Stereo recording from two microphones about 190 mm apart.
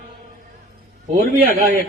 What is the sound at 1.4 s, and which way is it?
Speech, 50° right (ahead or behind).